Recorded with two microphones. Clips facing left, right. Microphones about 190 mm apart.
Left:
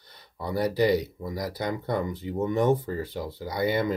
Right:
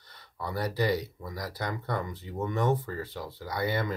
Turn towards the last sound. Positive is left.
turn(degrees=20)  # may be behind; listen again after turning